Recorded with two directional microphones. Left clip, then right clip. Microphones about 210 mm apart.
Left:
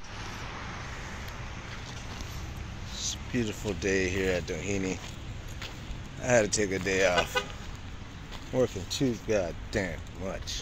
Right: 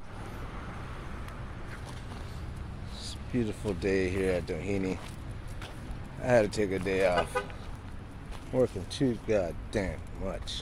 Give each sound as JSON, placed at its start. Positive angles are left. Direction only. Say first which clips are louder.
{"t": 3.0, "sound": "speech", "louder": "left 2 dB", "side_deg": -10}
{"t": 6.2, "sound": "speech", "louder": "even", "side_deg": -10}
{"t": 8.5, "sound": "speech", "louder": "even", "side_deg": -5}